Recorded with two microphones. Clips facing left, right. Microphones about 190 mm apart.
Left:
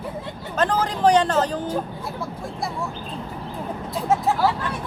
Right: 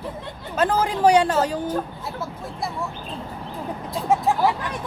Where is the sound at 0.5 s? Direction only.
10° right (ahead or behind).